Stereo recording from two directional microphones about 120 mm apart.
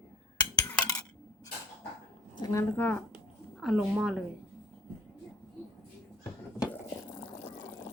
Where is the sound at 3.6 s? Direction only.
5° right (ahead or behind).